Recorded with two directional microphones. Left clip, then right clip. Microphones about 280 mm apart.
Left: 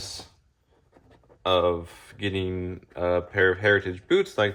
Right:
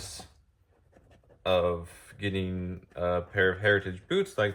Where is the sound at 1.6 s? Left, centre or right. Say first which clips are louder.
Left 4 dB; left.